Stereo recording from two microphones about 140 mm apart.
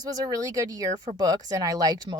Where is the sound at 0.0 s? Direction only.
25° right (ahead or behind).